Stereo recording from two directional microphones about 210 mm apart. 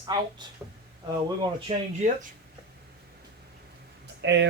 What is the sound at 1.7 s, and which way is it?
Speech, 30° right (ahead or behind).